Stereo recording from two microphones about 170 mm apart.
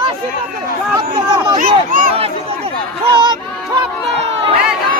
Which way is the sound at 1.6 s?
50° right (ahead or behind).